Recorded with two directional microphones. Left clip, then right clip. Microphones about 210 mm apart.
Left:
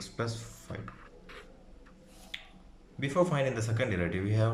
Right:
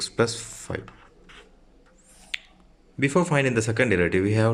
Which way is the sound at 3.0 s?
40° right (ahead or behind).